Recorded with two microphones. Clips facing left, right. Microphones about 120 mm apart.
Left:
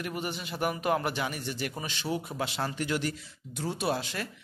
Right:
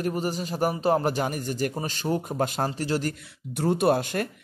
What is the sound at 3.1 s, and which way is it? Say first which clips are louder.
Speech: right 4 dB; 55° right (ahead or behind).